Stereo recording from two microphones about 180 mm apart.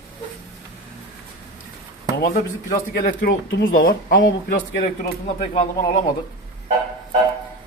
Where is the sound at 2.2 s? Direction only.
50° left (ahead or behind).